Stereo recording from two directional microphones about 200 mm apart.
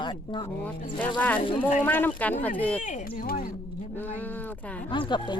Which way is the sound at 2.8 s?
40° left (ahead or behind).